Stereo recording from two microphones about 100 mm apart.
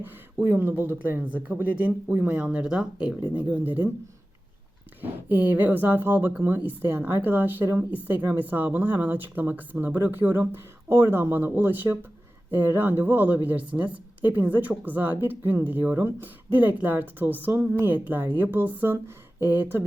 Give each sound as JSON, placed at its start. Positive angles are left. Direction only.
{"t": 0.0, "sound": "speech", "side_deg": -20}
{"t": 4.9, "sound": "speech", "side_deg": -20}